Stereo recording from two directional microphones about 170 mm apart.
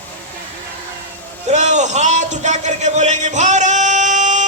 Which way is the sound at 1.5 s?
45° right (ahead or behind).